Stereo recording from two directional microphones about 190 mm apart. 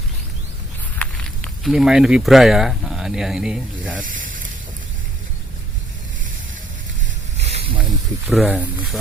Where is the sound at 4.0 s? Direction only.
45° right (ahead or behind).